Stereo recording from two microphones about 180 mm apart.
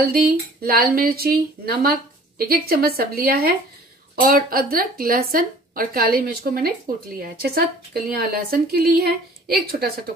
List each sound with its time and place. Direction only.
0.0 s speech: 55° right (ahead or behind)